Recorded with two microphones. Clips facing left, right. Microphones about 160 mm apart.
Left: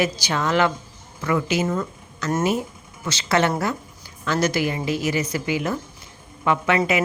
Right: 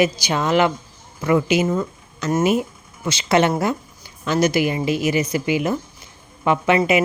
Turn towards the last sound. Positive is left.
turn(degrees=-20)  # may be behind; listen again after turning